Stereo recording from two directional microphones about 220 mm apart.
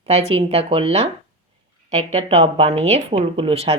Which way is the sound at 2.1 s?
30° right (ahead or behind).